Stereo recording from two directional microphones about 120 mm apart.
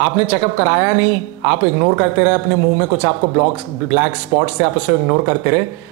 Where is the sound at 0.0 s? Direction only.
15° right (ahead or behind).